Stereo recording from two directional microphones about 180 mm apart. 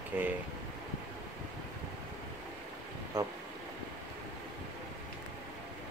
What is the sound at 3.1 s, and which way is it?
Speech, 20° right (ahead or behind).